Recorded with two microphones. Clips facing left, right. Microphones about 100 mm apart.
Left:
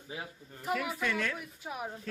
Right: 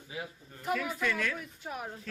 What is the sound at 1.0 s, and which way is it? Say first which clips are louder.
Speech: right 1 dB; 30° left (ahead or behind).